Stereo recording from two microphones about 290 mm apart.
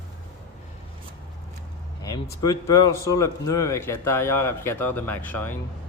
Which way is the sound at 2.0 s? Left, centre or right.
Centre.